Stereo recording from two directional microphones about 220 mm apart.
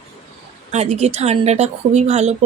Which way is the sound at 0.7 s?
30° right (ahead or behind).